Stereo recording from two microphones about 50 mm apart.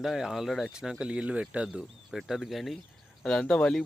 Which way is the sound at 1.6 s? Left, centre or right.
Centre.